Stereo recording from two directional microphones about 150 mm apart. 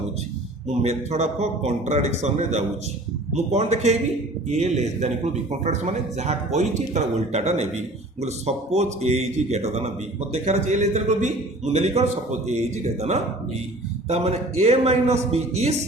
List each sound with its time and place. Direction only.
0.7 s speech: 45° right (ahead or behind)